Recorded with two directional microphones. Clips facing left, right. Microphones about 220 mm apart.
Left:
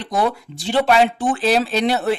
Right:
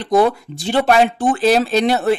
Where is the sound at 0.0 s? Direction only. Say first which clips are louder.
Right 6 dB; 45° right (ahead or behind).